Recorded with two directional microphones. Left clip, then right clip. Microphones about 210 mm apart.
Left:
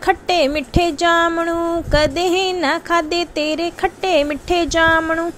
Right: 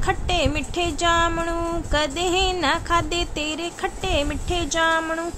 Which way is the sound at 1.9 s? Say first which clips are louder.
Left 6 dB; 20° left (ahead or behind).